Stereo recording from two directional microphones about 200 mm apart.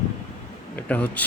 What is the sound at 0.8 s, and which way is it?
Speech, 5° left (ahead or behind).